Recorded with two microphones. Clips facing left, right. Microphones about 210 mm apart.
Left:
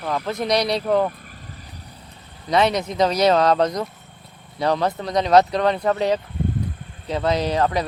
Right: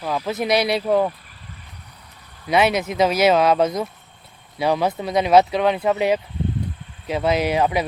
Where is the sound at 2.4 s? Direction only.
5° right (ahead or behind).